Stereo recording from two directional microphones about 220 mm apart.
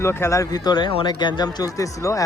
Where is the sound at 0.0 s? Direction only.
10° left (ahead or behind).